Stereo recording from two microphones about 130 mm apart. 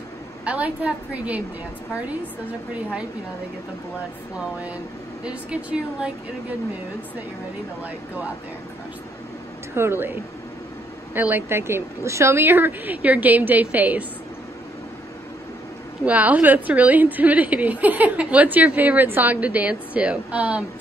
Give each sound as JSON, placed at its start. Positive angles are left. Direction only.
{"t": 0.5, "sound": "a woman's voice", "side_deg": -10}
{"t": 5.2, "sound": "a woman's voice", "side_deg": -10}
{"t": 9.8, "sound": "a woman's voice", "side_deg": -15}
{"t": 11.1, "sound": "a woman's voice", "side_deg": -15}
{"t": 16.1, "sound": "a woman's voice", "side_deg": -10}